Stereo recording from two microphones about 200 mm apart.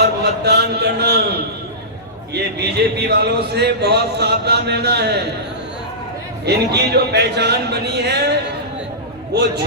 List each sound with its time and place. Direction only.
0.2 s a sound: 55° right (ahead or behind)
2.3 s a man's voice: 55° right (ahead or behind)
6.4 s a man's voice: 55° right (ahead or behind)